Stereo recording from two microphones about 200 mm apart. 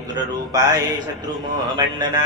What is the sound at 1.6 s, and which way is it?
Mantra, 20° right (ahead or behind).